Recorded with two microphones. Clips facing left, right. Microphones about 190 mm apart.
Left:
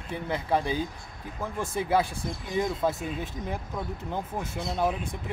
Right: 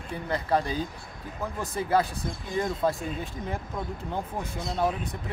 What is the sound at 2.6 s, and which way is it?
Speech, 10° left (ahead or behind).